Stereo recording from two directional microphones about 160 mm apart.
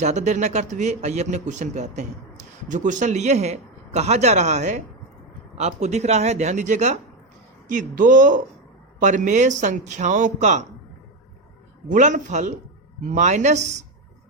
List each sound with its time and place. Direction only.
0.0 s a man's voice: 45° right (ahead or behind)
11.9 s a man's voice: 55° right (ahead or behind)